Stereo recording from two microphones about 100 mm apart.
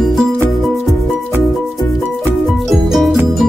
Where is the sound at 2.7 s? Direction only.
Centre (ahead or behind).